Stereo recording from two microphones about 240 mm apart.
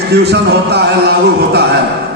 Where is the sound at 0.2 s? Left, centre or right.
Right.